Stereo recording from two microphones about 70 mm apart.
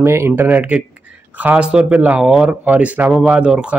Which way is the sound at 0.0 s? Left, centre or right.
Right.